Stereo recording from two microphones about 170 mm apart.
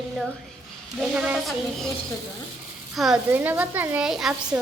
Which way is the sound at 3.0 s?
Centre (ahead or behind).